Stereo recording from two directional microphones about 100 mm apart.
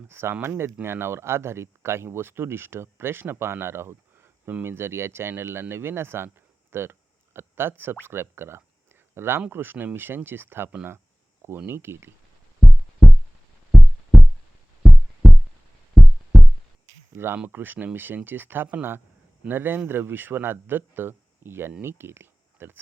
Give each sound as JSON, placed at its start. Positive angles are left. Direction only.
{"t": 0.1, "sound": "speech", "side_deg": -25}
{"t": 12.5, "sound": "heart sounds", "side_deg": 0}
{"t": 17.2, "sound": "speech", "side_deg": -20}